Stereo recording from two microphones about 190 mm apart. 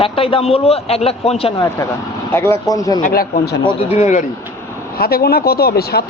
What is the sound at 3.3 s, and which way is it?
Speech, 35° left (ahead or behind).